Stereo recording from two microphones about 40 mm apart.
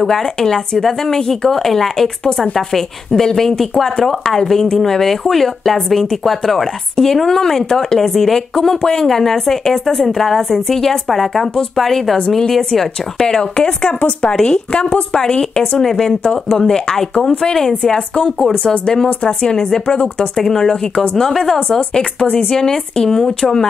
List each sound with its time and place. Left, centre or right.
0.0 s speech: centre
13.3 s speech: left
19.0 s speech: left
19.5 s speech: centre